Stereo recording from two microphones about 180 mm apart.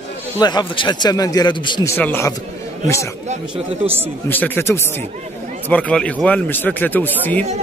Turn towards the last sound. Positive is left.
turn(degrees=10)  # may be behind; listen again after turning